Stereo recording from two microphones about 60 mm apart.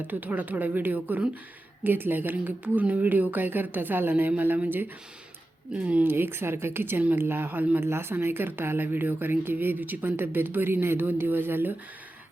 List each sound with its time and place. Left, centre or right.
0.1 s speech: right
5.7 s speech: centre
6.0 s speech: right
7.8 s speech: right